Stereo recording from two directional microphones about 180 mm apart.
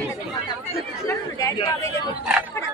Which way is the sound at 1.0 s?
15° left (ahead or behind).